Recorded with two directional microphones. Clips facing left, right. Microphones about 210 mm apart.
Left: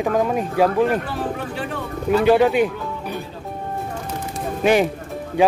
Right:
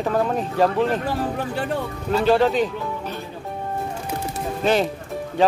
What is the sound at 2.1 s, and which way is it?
Speech, 15° left (ahead or behind).